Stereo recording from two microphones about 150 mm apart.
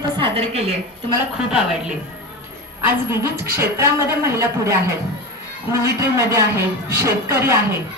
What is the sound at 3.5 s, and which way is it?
Speech, 15° right (ahead or behind).